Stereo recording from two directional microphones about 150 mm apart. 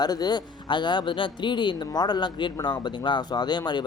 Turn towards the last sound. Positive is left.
turn(degrees=30)  # may be behind; listen again after turning